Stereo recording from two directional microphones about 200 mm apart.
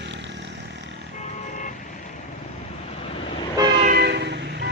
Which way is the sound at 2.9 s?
30° left (ahead or behind).